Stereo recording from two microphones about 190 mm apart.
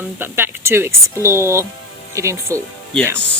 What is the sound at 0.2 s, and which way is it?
Speech, 10° right (ahead or behind).